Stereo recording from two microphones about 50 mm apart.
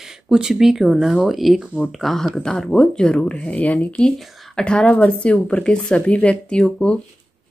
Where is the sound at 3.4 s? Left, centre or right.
Left.